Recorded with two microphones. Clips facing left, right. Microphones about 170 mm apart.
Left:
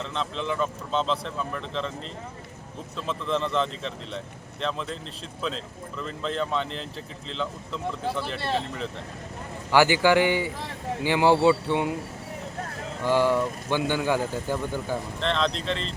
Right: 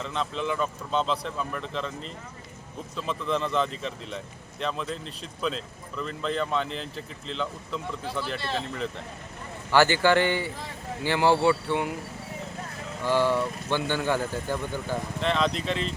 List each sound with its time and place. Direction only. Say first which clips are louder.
0.0 s speech: right 1 dB; 5° right (ahead or behind)
2.9 s speech: left 1 dB; centre (ahead or behind)
9.7 s speech: left 1 dB; 15° left (ahead or behind)
13.1 s speech: left 2 dB; 15° left (ahead or behind)
15.2 s speech: right 1 dB; 5° right (ahead or behind)